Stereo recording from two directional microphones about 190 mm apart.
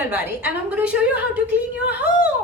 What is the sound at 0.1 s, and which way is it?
A woman's voice, 10° right (ahead or behind).